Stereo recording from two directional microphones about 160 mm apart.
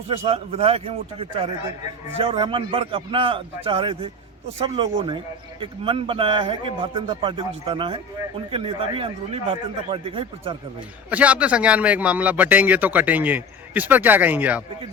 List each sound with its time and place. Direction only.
0.1 s a man's voice: 35° right (ahead or behind)
10.8 s a man's voice: 10° right (ahead or behind)